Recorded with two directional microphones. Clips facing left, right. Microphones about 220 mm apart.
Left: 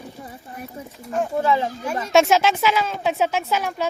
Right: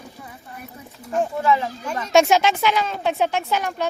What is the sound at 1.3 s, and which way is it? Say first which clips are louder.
Speech: left 2 dB; 30° left (ahead or behind).